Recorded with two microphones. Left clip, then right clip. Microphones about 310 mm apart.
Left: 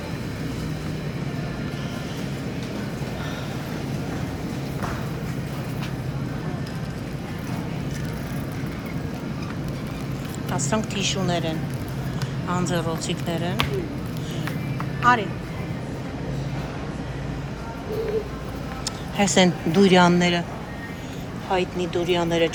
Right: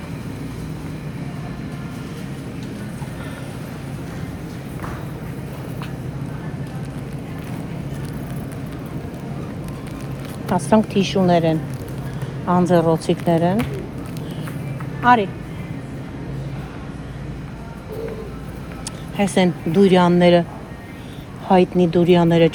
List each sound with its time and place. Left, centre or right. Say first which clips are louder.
10.5 s a woman's voice: right 9 dB; centre
15.0 s a woman's voice: right 4 dB; centre
19.1 s speech: even; centre
21.8 s a woman's voice: right 7 dB; centre